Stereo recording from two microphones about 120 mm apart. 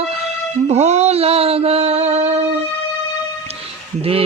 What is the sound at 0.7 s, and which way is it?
Music, 70° right (ahead or behind).